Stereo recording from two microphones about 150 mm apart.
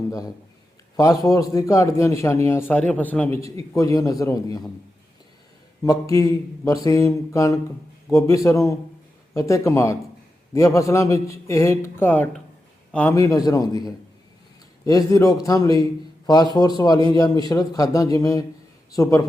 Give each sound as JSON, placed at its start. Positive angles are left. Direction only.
{"t": 0.9, "sound": "a man's voice", "side_deg": 25}
{"t": 5.8, "sound": "a man's voice", "side_deg": 20}